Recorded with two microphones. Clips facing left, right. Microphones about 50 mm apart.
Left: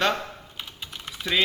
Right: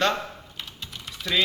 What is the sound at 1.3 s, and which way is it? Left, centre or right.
Speech, left.